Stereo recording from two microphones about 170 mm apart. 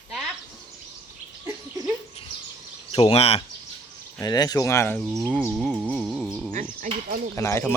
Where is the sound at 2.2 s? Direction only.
35° left (ahead or behind).